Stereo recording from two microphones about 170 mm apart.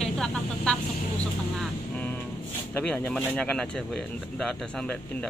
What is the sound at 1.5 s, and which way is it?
Vehicle, 5° left (ahead or behind).